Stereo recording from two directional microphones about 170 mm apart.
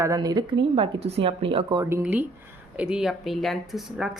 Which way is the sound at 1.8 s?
10° right (ahead or behind).